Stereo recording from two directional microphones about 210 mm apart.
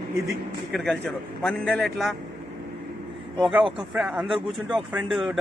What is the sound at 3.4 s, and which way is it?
A man's voice, centre (ahead or behind).